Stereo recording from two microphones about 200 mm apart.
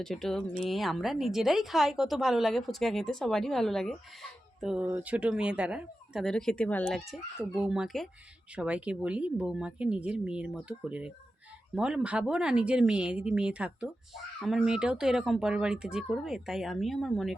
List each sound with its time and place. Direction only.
0.0 s speech: centre (ahead or behind)